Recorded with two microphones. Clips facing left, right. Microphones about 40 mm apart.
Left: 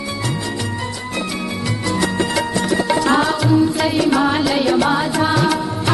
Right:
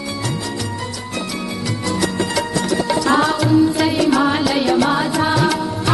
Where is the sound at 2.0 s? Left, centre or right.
Left.